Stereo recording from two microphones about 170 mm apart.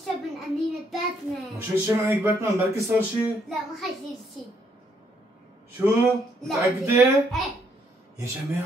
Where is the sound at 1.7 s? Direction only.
15° right (ahead or behind).